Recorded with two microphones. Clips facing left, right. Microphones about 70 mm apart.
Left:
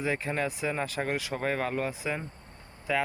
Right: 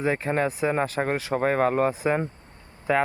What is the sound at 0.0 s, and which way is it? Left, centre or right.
Speech, right.